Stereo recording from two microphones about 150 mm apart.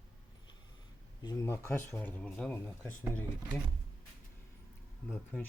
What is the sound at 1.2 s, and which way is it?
Speech, 25° left (ahead or behind).